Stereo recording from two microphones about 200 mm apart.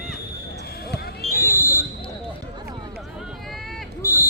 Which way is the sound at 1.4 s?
15° left (ahead or behind).